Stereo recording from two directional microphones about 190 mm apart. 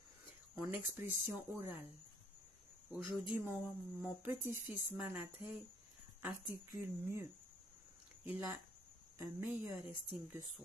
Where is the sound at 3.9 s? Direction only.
10° right (ahead or behind).